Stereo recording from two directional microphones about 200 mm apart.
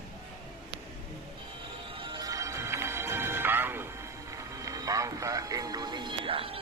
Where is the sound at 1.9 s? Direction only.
25° right (ahead or behind).